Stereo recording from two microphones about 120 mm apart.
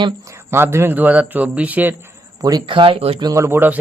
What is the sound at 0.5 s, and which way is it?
A man's voice, 20° right (ahead or behind).